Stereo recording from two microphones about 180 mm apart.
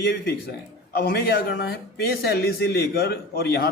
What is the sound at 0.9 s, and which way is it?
Speech, 60° left (ahead or behind).